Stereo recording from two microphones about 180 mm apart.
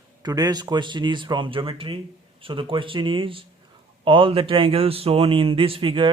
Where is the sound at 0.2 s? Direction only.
20° right (ahead or behind).